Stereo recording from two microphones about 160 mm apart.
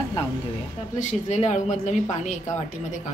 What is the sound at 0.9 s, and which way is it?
A woman's voice, 45° left (ahead or behind).